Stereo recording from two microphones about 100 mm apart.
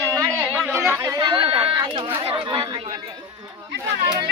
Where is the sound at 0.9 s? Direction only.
30° right (ahead or behind).